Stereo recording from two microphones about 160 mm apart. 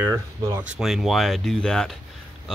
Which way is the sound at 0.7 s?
Centre (ahead or behind).